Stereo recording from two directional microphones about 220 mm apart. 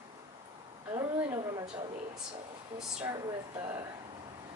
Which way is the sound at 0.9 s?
15° right (ahead or behind).